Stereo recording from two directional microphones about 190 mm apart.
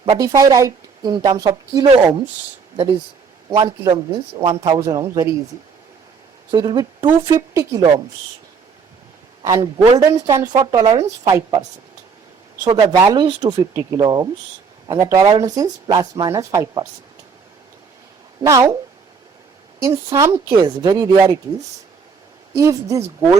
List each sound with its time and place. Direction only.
0.0 s speech: 25° right (ahead or behind)
3.5 s speech: 20° right (ahead or behind)
6.5 s speech: 20° right (ahead or behind)
9.4 s a man's voice: 15° right (ahead or behind)
12.6 s speech: 15° right (ahead or behind)
18.4 s a man's voice: 15° right (ahead or behind)
19.8 s speech: 15° right (ahead or behind)
22.5 s a man's voice: 15° right (ahead or behind)